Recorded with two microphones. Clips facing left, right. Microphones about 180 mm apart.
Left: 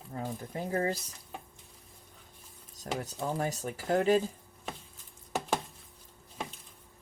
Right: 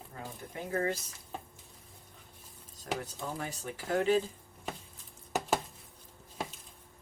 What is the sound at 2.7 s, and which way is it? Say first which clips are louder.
Speech: left 2 dB; 40° left (ahead or behind).